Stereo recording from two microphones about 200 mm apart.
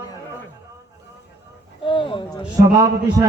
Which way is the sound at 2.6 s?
15° right (ahead or behind).